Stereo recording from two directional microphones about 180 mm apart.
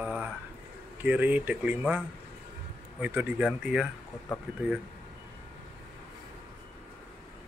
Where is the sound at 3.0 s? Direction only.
10° right (ahead or behind).